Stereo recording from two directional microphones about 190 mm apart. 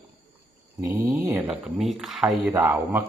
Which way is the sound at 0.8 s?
15° right (ahead or behind).